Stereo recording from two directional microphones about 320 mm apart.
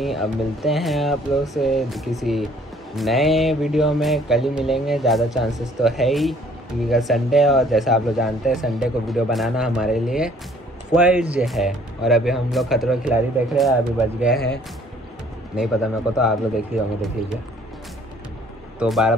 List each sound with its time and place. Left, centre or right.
0.0 s speech: centre
15.5 s speech: centre
18.8 s speech: centre